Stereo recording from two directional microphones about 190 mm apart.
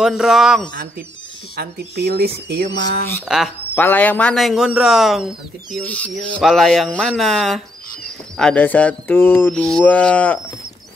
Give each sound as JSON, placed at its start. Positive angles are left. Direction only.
{"t": 0.0, "sound": "speech", "side_deg": 0}
{"t": 1.6, "sound": "speech", "side_deg": -55}
{"t": 3.3, "sound": "speech", "side_deg": 0}
{"t": 3.7, "sound": "speech", "side_deg": 10}
{"t": 8.4, "sound": "mantra", "side_deg": 5}